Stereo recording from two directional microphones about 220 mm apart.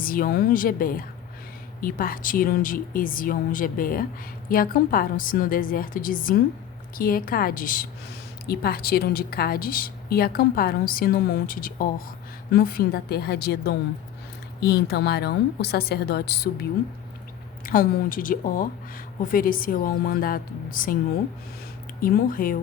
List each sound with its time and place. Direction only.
0.0 s a woman's voice: 40° left (ahead or behind)
17.7 s speech: 40° left (ahead or behind)
22.0 s speech: 40° left (ahead or behind)